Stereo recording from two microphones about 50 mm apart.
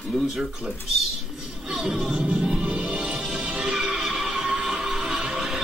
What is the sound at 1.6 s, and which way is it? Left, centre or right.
Music, centre.